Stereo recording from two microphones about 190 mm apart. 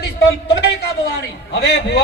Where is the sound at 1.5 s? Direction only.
65° left (ahead or behind).